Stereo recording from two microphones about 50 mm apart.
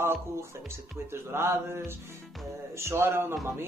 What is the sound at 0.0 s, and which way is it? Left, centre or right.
Music, right.